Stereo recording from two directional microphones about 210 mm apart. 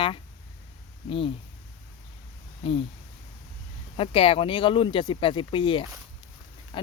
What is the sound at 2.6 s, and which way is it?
Speech, 25° left (ahead or behind).